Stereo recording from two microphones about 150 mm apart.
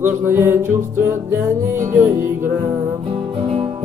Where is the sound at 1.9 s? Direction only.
15° right (ahead or behind).